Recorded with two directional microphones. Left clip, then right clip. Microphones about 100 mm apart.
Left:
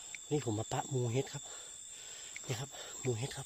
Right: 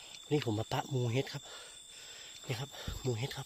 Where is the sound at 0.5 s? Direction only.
10° right (ahead or behind).